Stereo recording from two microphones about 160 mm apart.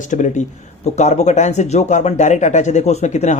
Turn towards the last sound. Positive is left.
turn(degrees=45)  # may be behind; listen again after turning